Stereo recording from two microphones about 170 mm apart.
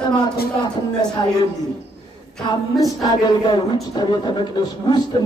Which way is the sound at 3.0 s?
25° left (ahead or behind).